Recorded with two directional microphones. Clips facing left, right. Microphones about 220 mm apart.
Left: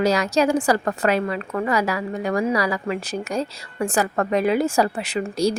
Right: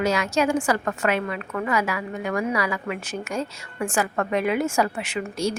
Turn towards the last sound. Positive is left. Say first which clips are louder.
# left 4 dB
turn(degrees=35)  # may be behind; listen again after turning